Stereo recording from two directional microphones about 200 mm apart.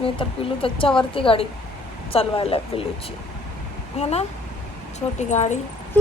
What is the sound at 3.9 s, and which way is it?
Speech, 30° left (ahead or behind).